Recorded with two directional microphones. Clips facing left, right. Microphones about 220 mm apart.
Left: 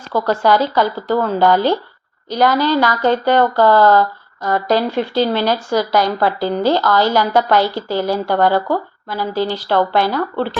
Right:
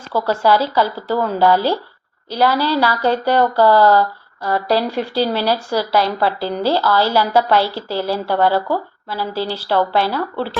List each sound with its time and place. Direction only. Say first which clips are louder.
0.1 s speech: left 1 dB; 5° right (ahead or behind)
3.0 s speech: left 2 dB; 35° right (ahead or behind)
3.3 s speech: right 1 dB; 10° right (ahead or behind)
4.9 s speech: left 2 dB; 35° right (ahead or behind)
5.2 s speech: even; 5° right (ahead or behind)